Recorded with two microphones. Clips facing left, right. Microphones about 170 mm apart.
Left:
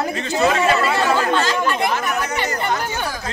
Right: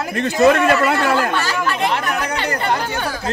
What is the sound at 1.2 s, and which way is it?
Speech, 20° left (ahead or behind).